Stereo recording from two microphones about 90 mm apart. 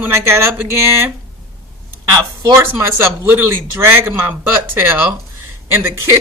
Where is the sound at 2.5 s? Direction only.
25° right (ahead or behind).